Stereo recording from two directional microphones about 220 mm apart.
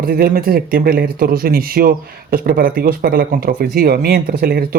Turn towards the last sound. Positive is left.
turn(degrees=-45)  # may be behind; listen again after turning